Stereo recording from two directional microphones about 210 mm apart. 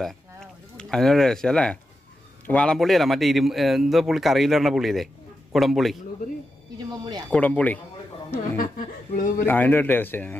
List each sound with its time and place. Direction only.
0.0 s a man's voice: centre (ahead or behind)
7.2 s a man's voice: 5° left (ahead or behind)
8.5 s speech: 40° left (ahead or behind)
9.5 s a man's voice: 10° left (ahead or behind)